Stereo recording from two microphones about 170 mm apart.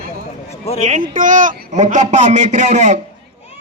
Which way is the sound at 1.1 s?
50° right (ahead or behind).